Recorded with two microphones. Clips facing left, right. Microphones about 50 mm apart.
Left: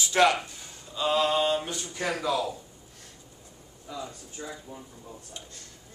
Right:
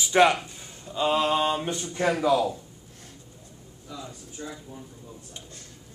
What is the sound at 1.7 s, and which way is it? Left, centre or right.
Speech, right.